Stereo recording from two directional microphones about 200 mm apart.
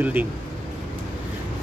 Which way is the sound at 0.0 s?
10° right (ahead or behind).